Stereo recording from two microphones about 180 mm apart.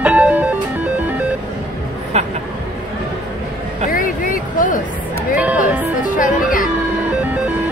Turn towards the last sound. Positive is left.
turn(degrees=50)  # may be behind; listen again after turning